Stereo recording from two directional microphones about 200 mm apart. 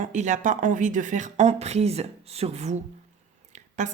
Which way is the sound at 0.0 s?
40° right (ahead or behind).